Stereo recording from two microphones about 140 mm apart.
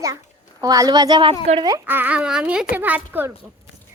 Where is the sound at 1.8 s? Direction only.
15° right (ahead or behind).